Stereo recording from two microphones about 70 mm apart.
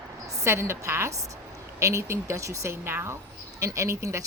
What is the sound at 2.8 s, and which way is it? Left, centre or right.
Speech, right.